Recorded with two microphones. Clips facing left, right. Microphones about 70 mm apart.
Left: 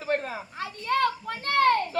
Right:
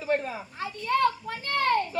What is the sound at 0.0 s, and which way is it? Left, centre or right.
Children playing, left.